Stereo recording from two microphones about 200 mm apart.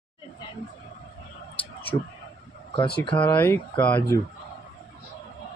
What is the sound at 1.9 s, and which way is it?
Speech, 25° left (ahead or behind).